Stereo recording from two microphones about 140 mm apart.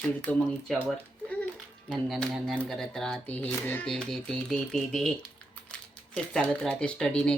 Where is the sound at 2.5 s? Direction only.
Centre (ahead or behind).